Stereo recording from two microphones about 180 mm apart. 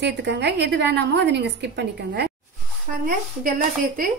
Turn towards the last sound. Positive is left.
turn(degrees=-50)  # may be behind; listen again after turning